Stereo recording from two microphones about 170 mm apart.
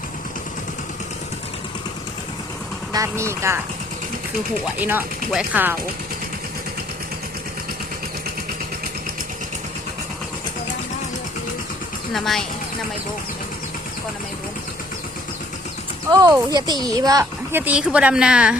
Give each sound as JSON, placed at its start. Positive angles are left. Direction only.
{"t": 2.9, "sound": "speech", "side_deg": -20}
{"t": 4.8, "sound": "speech", "side_deg": -10}
{"t": 12.1, "sound": "a woman's voice", "side_deg": 0}
{"t": 16.1, "sound": "a woman's voice", "side_deg": -20}
{"t": 17.6, "sound": "a woman's voice", "side_deg": -5}